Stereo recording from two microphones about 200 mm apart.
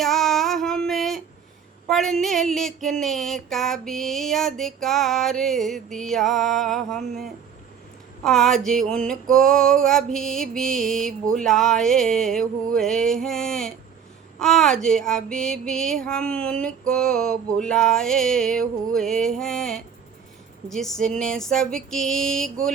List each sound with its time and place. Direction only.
0.0 s female singing: centre (ahead or behind)
1.9 s music: centre (ahead or behind)